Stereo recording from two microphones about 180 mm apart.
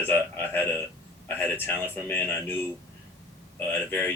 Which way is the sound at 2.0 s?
10° left (ahead or behind).